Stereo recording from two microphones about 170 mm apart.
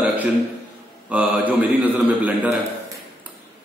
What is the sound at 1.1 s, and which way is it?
A man's voice, 10° right (ahead or behind).